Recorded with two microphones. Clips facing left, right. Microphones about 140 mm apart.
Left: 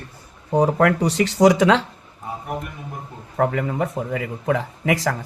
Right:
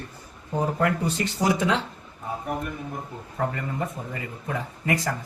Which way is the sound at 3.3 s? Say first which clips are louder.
Left 7 dB; 80° left.